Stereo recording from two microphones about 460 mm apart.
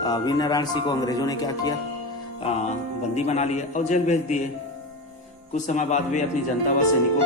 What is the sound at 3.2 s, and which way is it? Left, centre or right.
Speech, centre.